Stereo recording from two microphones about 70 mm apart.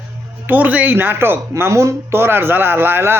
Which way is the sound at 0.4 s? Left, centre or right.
Right.